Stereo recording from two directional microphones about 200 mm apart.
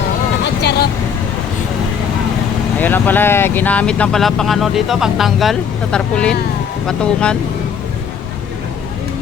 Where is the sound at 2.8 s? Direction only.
10° left (ahead or behind).